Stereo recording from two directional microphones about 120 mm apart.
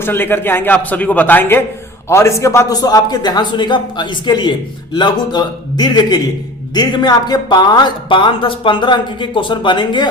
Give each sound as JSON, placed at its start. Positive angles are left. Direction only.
{"t": 0.0, "sound": "a man's voice", "side_deg": 15}